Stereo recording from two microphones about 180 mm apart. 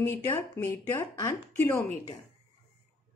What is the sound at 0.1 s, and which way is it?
Speech, 10° left (ahead or behind).